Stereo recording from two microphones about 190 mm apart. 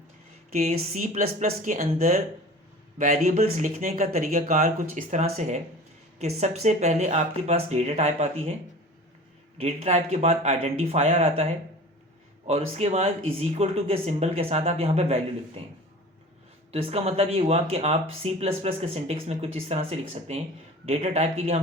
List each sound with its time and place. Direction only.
0.5 s speech: 40° right (ahead or behind)
9.6 s speech: 35° right (ahead or behind)
12.5 s speech: 35° right (ahead or behind)
16.7 s speech: 30° right (ahead or behind)